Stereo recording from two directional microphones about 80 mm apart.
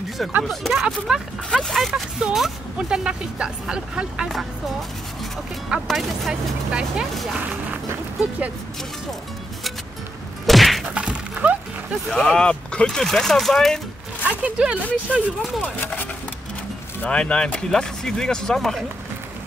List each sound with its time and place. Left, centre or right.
0.5 s speech: centre
0.8 s speech: centre
1.5 s speech: centre
5.9 s speech: centre
10.4 s whack: centre
11.0 s a sound: centre
12.1 s speech: centre
14.2 s speech: centre
14.8 s speech: centre